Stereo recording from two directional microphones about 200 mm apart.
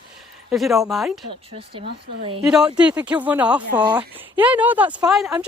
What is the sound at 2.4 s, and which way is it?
Speech, 5° right (ahead or behind).